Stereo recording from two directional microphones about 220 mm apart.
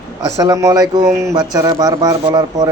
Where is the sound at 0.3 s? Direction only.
15° right (ahead or behind).